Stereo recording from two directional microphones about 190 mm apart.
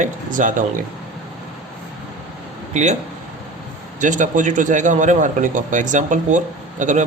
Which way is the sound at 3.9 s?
40° right (ahead or behind).